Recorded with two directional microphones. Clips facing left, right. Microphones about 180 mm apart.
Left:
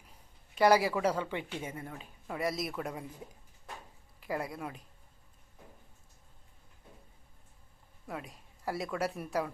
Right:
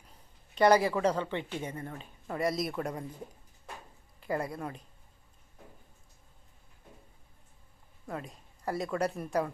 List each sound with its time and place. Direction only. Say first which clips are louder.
0.5 s a woman's voice: right 2 dB; 5° left (ahead or behind)
4.2 s speech: right 3 dB; centre (ahead or behind)
8.0 s speech: right 2 dB; 5° left (ahead or behind)